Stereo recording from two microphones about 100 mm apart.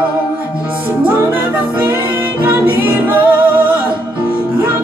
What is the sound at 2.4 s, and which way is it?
Music, 15° right (ahead or behind).